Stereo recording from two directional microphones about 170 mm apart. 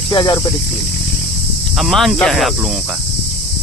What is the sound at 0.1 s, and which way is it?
Speech, 25° left (ahead or behind).